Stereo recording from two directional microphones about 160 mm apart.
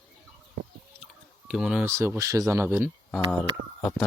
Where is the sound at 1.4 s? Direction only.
5° right (ahead or behind).